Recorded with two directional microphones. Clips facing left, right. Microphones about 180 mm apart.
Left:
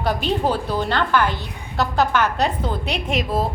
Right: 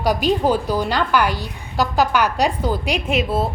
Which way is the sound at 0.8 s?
10° right (ahead or behind).